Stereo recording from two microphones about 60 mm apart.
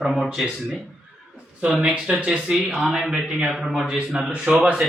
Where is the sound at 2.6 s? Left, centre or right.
Centre.